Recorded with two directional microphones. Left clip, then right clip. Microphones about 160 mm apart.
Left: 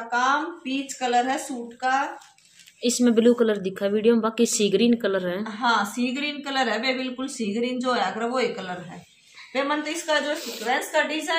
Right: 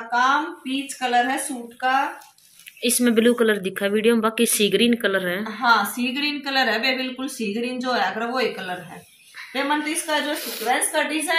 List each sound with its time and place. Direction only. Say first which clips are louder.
0.1 s speech: right 3 dB; centre (ahead or behind)
5.4 s a woman's voice: right 6 dB; 20° left (ahead or behind)
10.4 s a woman's voice: right 3 dB; centre (ahead or behind)